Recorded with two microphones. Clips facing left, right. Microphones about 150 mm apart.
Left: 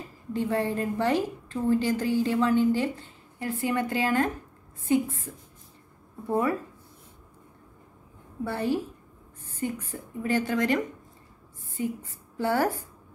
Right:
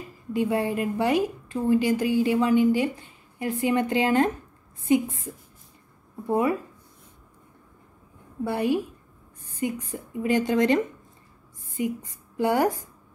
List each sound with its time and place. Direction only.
0.3 s a woman's voice: 10° right (ahead or behind)
6.2 s a woman's voice: 15° right (ahead or behind)
8.5 s a woman's voice: 15° right (ahead or behind)